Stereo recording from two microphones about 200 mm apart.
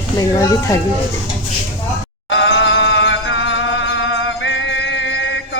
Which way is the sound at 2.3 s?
65° left (ahead or behind).